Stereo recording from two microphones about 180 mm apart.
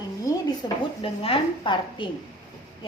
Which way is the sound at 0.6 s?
25° left (ahead or behind).